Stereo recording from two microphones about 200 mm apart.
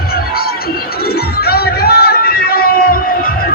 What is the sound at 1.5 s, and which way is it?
Music, 50° left (ahead or behind).